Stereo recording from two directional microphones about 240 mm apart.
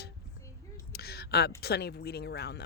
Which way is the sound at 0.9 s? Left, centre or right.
Left.